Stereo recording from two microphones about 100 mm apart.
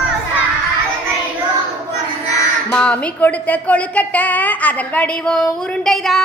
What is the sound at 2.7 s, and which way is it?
A woman's voice, 10° left (ahead or behind).